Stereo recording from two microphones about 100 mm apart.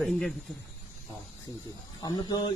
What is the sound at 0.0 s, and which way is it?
Speech, centre (ahead or behind).